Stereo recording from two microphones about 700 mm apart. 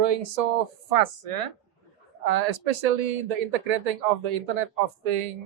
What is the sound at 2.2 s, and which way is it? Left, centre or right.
Speech, right.